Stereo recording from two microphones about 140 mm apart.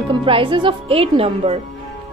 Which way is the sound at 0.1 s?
35° right (ahead or behind).